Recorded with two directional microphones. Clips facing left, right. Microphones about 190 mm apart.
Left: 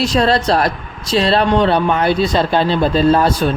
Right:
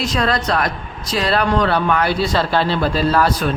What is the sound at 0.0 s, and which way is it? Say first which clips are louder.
Speech: left 5 dB; 30° left (ahead or behind).